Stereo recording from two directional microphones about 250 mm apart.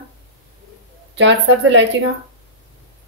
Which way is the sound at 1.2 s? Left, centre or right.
Right.